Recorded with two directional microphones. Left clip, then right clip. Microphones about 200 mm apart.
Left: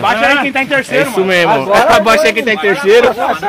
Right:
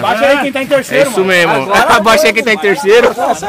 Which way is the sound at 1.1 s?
5° left (ahead or behind).